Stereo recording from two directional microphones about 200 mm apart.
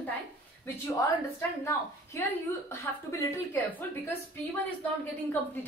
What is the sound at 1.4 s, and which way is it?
A woman's voice, 15° left (ahead or behind).